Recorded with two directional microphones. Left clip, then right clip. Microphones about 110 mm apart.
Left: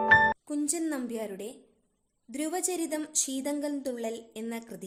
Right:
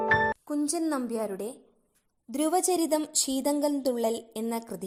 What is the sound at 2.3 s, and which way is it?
A woman's voice, 40° right (ahead or behind).